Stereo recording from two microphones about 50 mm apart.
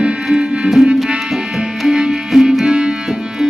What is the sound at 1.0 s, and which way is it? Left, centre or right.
Tabla, centre.